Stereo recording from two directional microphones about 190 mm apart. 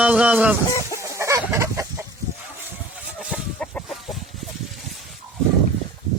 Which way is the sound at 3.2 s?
Centre (ahead or behind).